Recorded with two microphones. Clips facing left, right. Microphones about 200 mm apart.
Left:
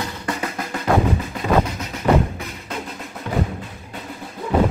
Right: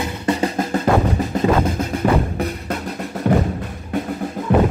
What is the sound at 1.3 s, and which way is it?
Music, 50° right (ahead or behind).